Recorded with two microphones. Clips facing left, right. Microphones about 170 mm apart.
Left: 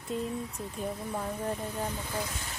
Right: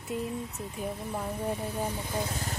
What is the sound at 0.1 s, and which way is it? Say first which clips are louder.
Speech: even; centre (ahead or behind).